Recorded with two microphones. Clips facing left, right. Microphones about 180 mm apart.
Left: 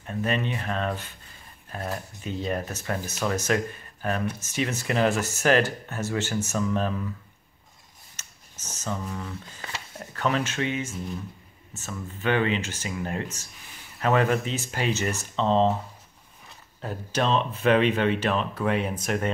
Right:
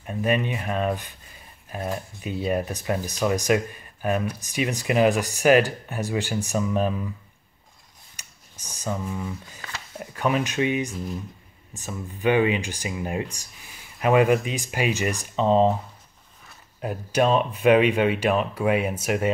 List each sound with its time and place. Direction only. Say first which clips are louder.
0.0 s speech: right 3 dB; 10° right (ahead or behind)
8.2 s a sound: even; 15° right (ahead or behind)
9.9 s speech: right 2 dB; 15° right (ahead or behind)
16.8 s speech: right 5 dB; 10° right (ahead or behind)